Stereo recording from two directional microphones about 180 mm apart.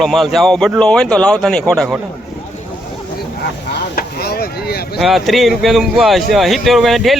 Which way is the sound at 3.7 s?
60° left (ahead or behind).